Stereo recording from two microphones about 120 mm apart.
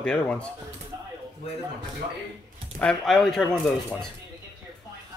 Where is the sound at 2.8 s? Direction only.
5° left (ahead or behind).